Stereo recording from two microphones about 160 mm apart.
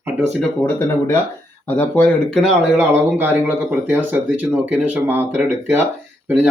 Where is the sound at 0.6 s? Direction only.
15° left (ahead or behind).